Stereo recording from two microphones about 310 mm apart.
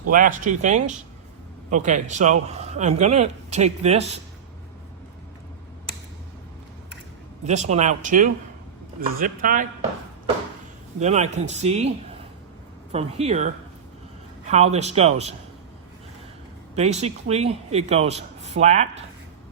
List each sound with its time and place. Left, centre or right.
0.1 s speech: right
7.4 s speech: right
11.0 s speech: right
12.9 s speech: centre
16.7 s speech: right